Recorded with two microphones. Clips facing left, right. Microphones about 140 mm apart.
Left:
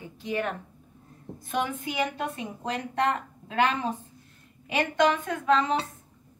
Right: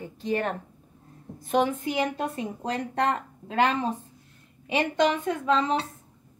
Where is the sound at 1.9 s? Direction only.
35° right (ahead or behind).